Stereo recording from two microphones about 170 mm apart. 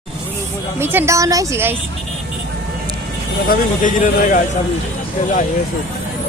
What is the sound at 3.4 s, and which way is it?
Speech, 50° left (ahead or behind).